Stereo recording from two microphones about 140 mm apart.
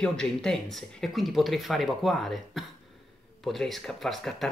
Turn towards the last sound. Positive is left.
turn(degrees=0)  # may be behind; listen again after turning